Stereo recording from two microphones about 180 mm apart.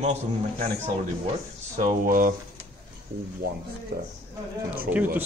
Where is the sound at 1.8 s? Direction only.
50° right (ahead or behind).